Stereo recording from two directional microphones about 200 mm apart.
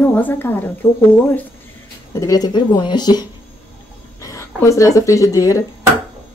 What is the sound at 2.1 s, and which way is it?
A woman's voice, 15° left (ahead or behind).